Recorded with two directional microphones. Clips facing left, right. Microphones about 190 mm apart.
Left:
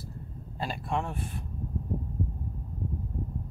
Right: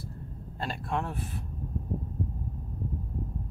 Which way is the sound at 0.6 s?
Centre (ahead or behind).